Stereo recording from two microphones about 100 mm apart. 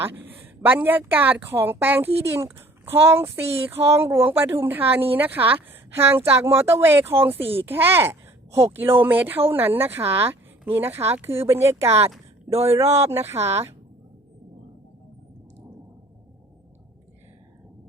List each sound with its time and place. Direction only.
0.4 s speech: 20° right (ahead or behind)
12.5 s speech: 90° right
13.1 s speech: 25° right (ahead or behind)